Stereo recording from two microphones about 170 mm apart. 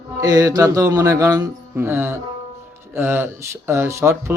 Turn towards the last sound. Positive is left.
turn(degrees=-15)  # may be behind; listen again after turning